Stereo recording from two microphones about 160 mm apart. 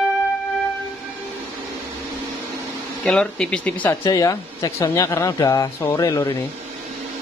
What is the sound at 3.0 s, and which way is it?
Speech, 5° left (ahead or behind).